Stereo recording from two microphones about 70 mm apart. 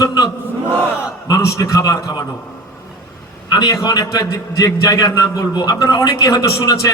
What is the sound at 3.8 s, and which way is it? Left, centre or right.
A man's voice, left.